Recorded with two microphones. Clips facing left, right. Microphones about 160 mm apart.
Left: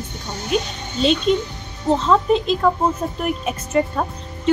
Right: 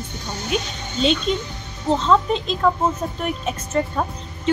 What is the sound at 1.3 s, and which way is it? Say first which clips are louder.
Speech: left 5 dB; 5° left (ahead or behind).